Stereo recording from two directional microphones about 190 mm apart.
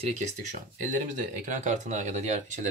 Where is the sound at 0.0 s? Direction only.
40° right (ahead or behind).